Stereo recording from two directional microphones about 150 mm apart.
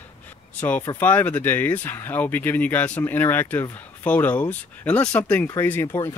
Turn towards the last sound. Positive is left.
turn(degrees=20)  # may be behind; listen again after turning